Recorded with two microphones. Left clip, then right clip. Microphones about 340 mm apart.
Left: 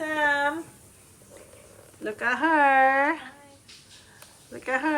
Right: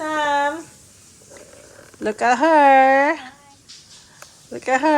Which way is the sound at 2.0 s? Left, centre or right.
Centre.